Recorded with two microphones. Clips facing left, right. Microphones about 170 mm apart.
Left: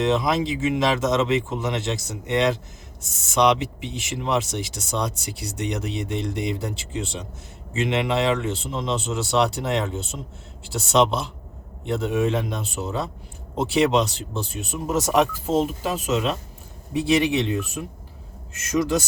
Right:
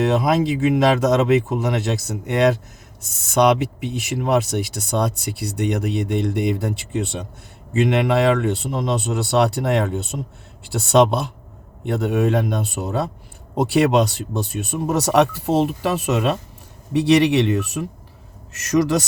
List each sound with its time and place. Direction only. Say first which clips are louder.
0.0 s speech: right 3 dB; 60° right (ahead or behind)
16.9 s speech: right 5 dB; 70° right (ahead or behind)